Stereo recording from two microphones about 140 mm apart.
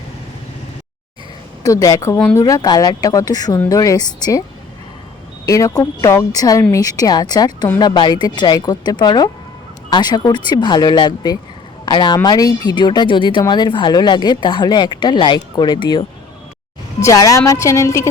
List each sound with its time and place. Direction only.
1.6 s a woman's voice: 25° left (ahead or behind)
5.5 s a woman's voice: 25° left (ahead or behind)
17.0 s a woman's voice: 25° left (ahead or behind)